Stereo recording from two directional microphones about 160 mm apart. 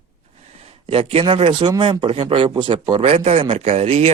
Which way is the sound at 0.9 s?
35° right (ahead or behind).